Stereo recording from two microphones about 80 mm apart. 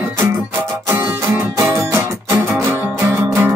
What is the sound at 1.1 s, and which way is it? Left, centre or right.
Music, right.